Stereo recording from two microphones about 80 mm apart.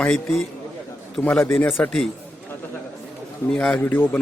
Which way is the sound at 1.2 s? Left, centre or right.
Centre.